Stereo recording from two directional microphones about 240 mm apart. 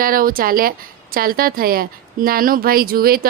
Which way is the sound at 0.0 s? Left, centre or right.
Right.